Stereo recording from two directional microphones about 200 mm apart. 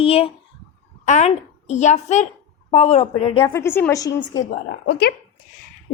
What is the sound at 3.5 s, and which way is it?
Speech, 10° left (ahead or behind).